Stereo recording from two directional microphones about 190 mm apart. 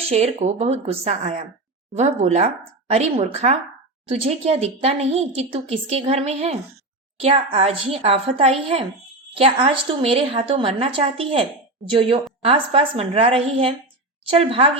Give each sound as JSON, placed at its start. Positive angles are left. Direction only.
{"t": 0.1, "sound": "a woman's voice", "side_deg": -35}